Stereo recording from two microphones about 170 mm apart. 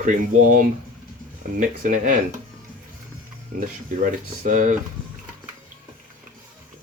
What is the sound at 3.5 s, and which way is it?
Speech, 55° right (ahead or behind).